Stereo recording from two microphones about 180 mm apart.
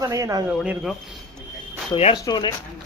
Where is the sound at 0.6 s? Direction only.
Centre (ahead or behind).